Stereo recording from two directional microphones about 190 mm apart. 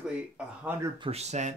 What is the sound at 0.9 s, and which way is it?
Speech, 30° right (ahead or behind).